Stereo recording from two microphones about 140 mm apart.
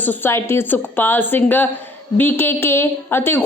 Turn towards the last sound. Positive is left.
turn(degrees=15)  # may be behind; listen again after turning